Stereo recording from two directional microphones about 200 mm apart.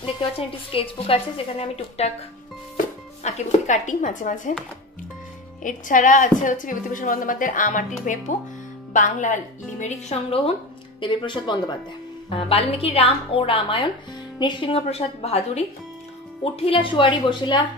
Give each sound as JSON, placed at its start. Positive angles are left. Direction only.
{"t": 0.0, "sound": "a woman's voice", "side_deg": 25}
{"t": 3.3, "sound": "a woman's voice", "side_deg": 35}
{"t": 5.6, "sound": "a woman's voice", "side_deg": 40}